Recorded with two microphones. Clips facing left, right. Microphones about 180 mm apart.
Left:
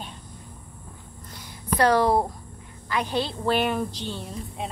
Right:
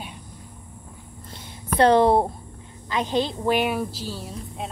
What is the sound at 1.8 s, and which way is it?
A woman's voice, 25° right (ahead or behind).